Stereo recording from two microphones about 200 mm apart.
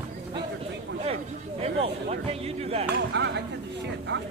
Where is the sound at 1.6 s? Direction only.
30° right (ahead or behind).